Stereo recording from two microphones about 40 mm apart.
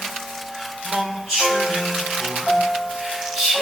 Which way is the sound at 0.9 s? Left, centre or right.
Centre.